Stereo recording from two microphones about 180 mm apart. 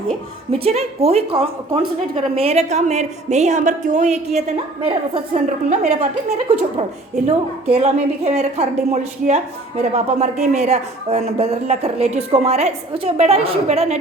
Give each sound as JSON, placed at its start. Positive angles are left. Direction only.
{"t": 0.6, "sound": "a woman's voice", "side_deg": -35}